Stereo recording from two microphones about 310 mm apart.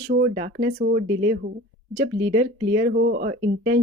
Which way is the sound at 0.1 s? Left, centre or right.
Right.